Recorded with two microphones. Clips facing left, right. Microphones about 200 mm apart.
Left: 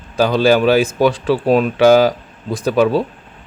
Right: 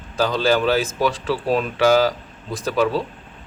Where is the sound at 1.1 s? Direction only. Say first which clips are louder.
Left 7 dB; 60° left (ahead or behind).